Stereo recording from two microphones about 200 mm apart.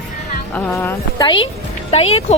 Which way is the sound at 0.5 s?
10° left (ahead or behind).